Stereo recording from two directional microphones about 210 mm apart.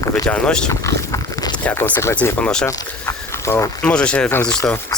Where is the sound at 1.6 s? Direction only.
10° left (ahead or behind).